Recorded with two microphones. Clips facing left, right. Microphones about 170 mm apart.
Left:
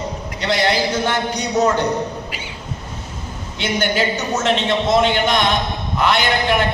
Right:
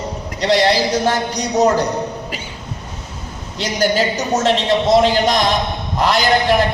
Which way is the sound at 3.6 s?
40° right (ahead or behind).